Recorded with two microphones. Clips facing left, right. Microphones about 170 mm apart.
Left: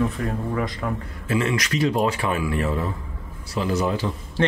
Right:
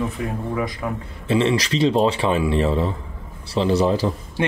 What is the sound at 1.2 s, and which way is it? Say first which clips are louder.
Speech: right 5 dB; 30° right (ahead or behind).